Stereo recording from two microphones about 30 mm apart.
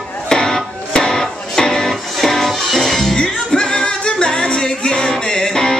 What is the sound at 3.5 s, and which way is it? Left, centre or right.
Music, left.